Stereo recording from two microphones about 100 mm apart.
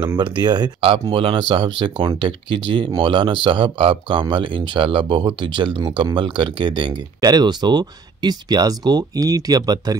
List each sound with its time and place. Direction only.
0.2 s speech: 45° right (ahead or behind)
0.7 s speech: 65° right (ahead or behind); by 9.9 s 40° right (ahead or behind)